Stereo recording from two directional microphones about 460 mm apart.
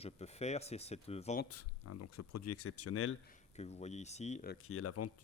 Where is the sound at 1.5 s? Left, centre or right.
Left.